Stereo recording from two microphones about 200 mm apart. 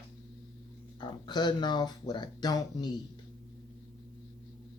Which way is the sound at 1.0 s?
20° left (ahead or behind).